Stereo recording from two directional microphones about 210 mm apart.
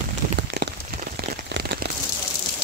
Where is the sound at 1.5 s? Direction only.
55° right (ahead or behind).